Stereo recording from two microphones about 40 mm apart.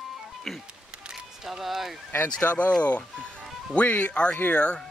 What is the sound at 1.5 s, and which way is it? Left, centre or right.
Speech, centre.